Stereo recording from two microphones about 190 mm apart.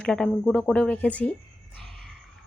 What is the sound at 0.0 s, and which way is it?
Speech, 5° left (ahead or behind).